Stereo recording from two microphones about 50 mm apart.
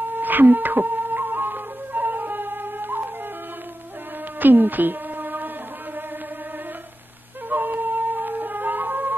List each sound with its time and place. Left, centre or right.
0.0 s flute: right
4.4 s a sound: right
7.4 s music: right